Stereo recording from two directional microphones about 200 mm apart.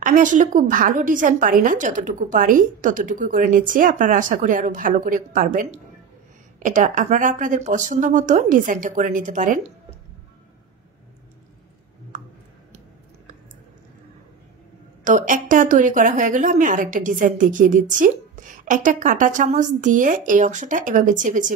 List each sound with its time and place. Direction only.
0.0 s a woman's voice: 40° right (ahead or behind)
15.0 s a woman's voice: 40° right (ahead or behind)